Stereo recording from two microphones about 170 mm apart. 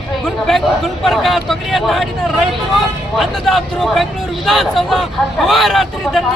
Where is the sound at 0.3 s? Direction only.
Centre (ahead or behind).